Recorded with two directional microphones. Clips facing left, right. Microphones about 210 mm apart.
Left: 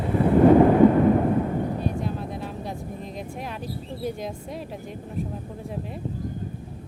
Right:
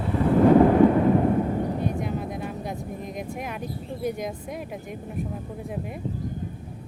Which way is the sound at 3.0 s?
15° right (ahead or behind).